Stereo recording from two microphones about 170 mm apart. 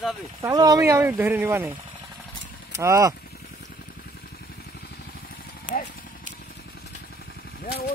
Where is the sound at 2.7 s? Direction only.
20° right (ahead or behind).